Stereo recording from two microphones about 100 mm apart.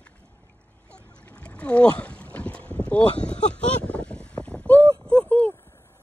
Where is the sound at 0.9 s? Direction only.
10° left (ahead or behind).